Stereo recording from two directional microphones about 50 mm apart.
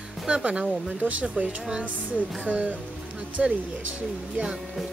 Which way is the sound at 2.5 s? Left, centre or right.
Right.